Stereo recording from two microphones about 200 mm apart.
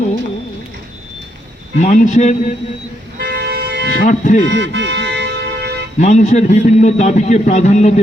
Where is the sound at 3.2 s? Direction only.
60° right (ahead or behind).